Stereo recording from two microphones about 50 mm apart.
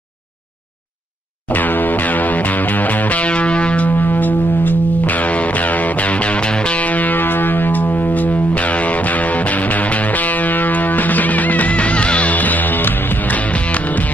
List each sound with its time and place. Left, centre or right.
1.5 s music: left